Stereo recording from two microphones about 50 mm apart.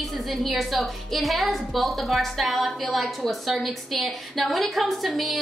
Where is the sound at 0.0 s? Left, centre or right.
Centre.